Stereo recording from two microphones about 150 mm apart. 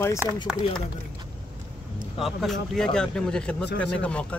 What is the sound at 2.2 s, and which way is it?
Speech, centre (ahead or behind).